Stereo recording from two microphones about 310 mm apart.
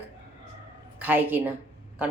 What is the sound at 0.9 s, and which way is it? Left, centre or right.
Speech, centre.